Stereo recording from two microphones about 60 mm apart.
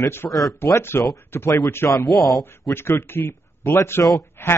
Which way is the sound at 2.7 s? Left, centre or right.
Left.